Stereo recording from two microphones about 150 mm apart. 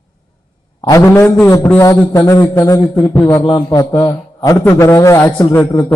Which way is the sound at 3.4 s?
25° left (ahead or behind).